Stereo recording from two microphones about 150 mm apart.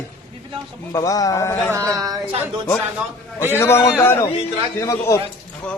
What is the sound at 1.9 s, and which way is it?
Speech, 25° right (ahead or behind).